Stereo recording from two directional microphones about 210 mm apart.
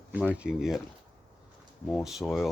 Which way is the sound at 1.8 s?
Centre (ahead or behind).